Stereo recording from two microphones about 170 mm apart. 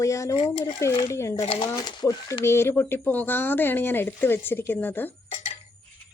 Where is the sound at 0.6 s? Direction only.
20° left (ahead or behind).